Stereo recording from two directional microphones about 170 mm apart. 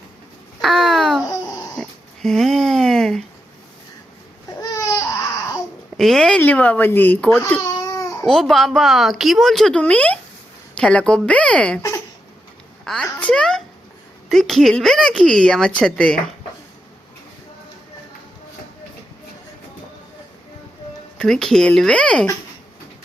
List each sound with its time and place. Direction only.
0.6 s a sound: centre (ahead or behind)
4.7 s baby cry: 20° left (ahead or behind)
6.0 s speech: centre (ahead or behind)
8.3 s a woman's voice: centre (ahead or behind)
12.8 s a child's voice: 5° left (ahead or behind)
21.2 s a woman's voice: 5° left (ahead or behind)